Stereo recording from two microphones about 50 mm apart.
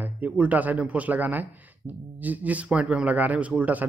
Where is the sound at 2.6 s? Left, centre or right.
Right.